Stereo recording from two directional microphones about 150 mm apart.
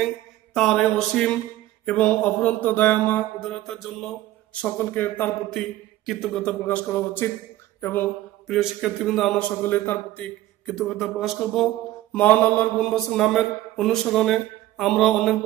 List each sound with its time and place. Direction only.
0.6 s mantra: 5° left (ahead or behind)
1.9 s a man's voice: 10° left (ahead or behind)
8.5 s mantra: centre (ahead or behind)
9.4 s a man's voice: 10° left (ahead or behind)
10.7 s mantra: centre (ahead or behind)